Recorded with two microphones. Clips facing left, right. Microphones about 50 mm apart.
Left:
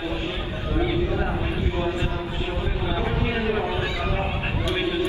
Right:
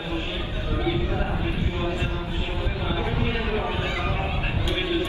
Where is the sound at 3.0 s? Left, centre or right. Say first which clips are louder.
Left 2 dB; left.